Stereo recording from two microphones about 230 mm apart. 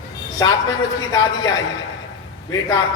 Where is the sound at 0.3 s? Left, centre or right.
Centre.